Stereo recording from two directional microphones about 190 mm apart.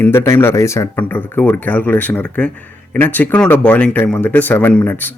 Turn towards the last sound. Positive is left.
turn(degrees=10)  # may be behind; listen again after turning